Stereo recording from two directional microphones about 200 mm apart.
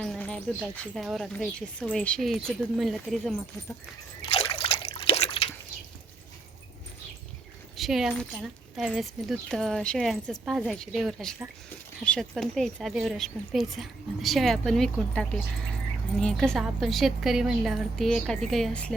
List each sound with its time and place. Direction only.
0.0 s a woman's voice: 5° left (ahead or behind)
4.3 s trickle: 25° left (ahead or behind)
7.8 s a woman's voice: centre (ahead or behind)